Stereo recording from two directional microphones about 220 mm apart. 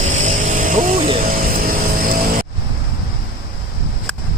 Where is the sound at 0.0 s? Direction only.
35° right (ahead or behind).